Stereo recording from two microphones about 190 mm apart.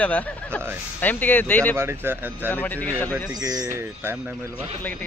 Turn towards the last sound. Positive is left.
turn(degrees=10)  # may be behind; listen again after turning